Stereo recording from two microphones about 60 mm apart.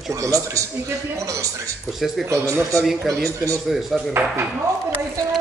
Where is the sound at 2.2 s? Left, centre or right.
Right.